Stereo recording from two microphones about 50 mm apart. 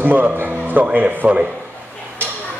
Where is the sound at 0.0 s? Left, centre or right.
Right.